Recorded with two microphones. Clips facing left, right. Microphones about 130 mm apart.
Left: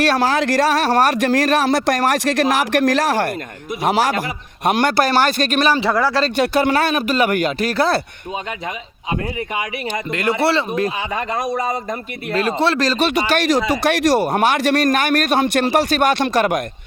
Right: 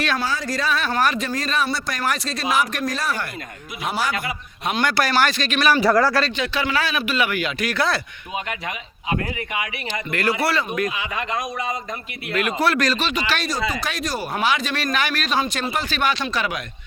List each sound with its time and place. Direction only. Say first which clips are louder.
0.2 s speech: left 9 dB; 85° left
3.8 s a man's voice: left 8 dB; 90° left
4.6 s speech: left 6 dB; 55° left (ahead or behind)
5.0 s speech: left 4 dB; 30° left (ahead or behind)
6.3 s speech: left 7 dB; 50° left (ahead or behind); by 7.9 s 35° left (ahead or behind)
10.1 s speech: left 4 dB; 20° left (ahead or behind)
13.1 s speech: left 6 dB; 50° left (ahead or behind)
13.4 s speech: left 8 dB; 75° left (ahead or behind)
15.9 s speech: left 7 dB; 50° left (ahead or behind)